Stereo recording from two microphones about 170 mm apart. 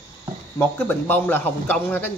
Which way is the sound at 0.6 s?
10° left (ahead or behind).